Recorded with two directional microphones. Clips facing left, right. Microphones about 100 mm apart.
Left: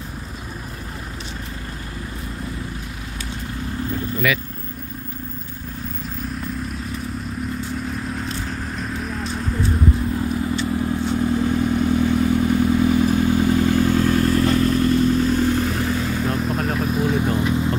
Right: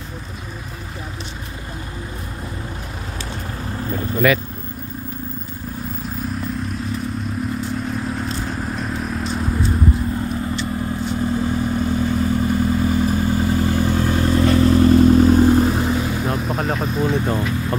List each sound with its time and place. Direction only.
4.2 s speech: 40° right (ahead or behind)
7.9 s vehicle: 5° right (ahead or behind)
10.3 s vehicle: 5° left (ahead or behind)
14.6 s vehicle: 35° right (ahead or behind); by 16.3 s 15° right (ahead or behind)
16.3 s vehicle: 5° right (ahead or behind); by 17.6 s 20° left (ahead or behind)